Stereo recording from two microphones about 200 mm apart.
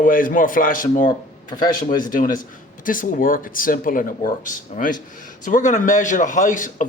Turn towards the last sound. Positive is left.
turn(degrees=40)  # may be behind; listen again after turning